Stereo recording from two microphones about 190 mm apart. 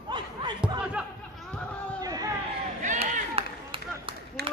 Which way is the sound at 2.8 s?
35° right (ahead or behind).